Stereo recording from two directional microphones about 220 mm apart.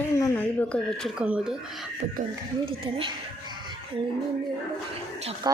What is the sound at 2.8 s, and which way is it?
Speech, 25° right (ahead or behind).